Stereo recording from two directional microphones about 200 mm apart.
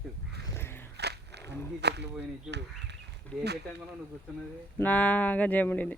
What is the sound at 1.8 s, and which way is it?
Speech, 55° right (ahead or behind).